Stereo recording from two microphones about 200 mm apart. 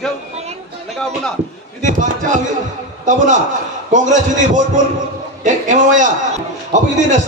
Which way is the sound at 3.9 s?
40° right (ahead or behind).